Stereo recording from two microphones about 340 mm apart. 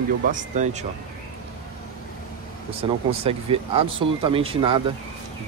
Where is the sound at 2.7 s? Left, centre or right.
Centre.